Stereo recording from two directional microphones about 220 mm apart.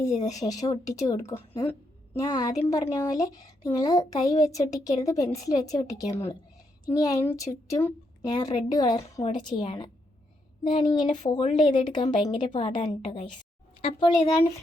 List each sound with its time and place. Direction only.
0.0 s a woman's voice: 15° left (ahead or behind)